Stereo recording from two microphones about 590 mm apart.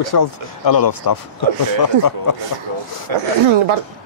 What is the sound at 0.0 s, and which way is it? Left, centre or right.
Speech, left.